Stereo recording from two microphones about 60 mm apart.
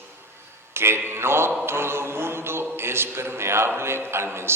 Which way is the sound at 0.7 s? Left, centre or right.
Right.